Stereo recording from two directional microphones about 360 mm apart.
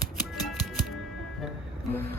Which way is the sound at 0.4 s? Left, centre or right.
Centre.